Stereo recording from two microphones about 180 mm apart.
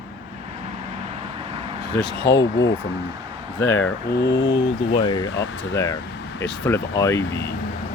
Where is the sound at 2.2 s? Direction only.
85° left.